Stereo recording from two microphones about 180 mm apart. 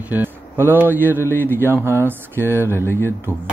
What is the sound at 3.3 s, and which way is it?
Speech, 10° right (ahead or behind).